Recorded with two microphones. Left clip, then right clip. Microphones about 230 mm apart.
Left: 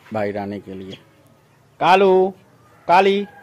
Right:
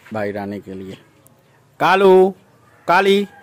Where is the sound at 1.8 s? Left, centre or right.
Right.